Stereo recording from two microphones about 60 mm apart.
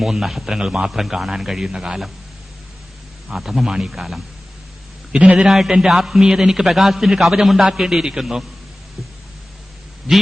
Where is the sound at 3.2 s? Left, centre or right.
Centre.